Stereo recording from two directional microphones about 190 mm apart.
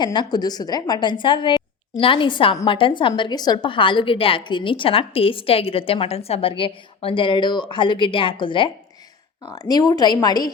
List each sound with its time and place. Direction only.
0.0 s a woman's voice: 25° left (ahead or behind)